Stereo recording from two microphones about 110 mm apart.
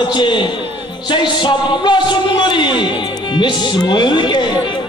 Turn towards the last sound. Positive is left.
turn(degrees=45)  # may be behind; listen again after turning